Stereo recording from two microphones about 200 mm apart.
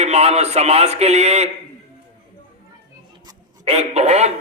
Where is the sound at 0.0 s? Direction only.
35° right (ahead or behind).